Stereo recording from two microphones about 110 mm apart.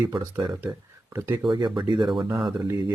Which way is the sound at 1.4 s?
40° right (ahead or behind).